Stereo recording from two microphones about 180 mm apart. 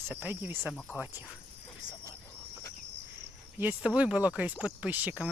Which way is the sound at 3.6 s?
10° right (ahead or behind).